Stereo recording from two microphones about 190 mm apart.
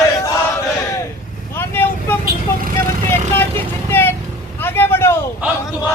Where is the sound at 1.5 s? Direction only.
10° left (ahead or behind).